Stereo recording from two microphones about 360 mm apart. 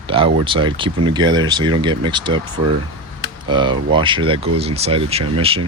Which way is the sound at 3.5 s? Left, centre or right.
Centre.